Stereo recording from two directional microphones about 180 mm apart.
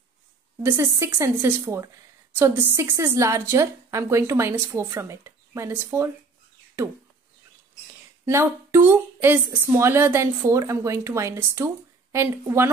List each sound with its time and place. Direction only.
0.6 s speech: 15° right (ahead or behind)
8.3 s speech: 15° right (ahead or behind)